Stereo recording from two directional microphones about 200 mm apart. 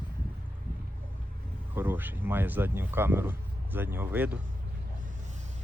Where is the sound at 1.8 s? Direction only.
10° right (ahead or behind).